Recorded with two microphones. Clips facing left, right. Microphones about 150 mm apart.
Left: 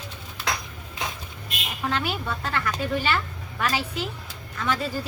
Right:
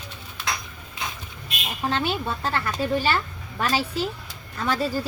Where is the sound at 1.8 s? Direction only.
30° right (ahead or behind).